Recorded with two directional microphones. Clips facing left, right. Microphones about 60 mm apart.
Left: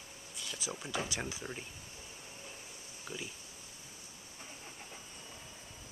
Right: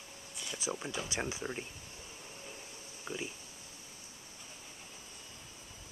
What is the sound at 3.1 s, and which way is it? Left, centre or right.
Speech, right.